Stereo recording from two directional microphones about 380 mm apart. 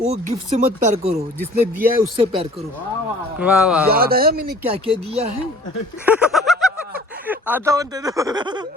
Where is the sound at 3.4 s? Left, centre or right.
Centre.